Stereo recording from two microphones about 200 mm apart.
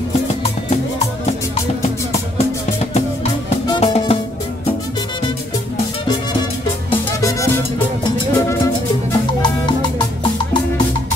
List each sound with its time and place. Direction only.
3.6 s music: 25° left (ahead or behind)
6.9 s music: 15° left (ahead or behind)